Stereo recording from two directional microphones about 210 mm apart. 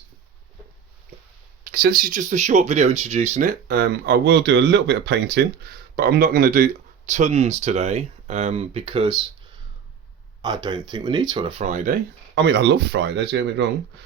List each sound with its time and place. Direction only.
1.6 s speech: 45° right (ahead or behind)
3.7 s speech: 50° right (ahead or behind); by 9.2 s 25° right (ahead or behind)
10.4 s speech: 20° right (ahead or behind); by 11.9 s 35° right (ahead or behind)
12.3 s speech: 55° right (ahead or behind)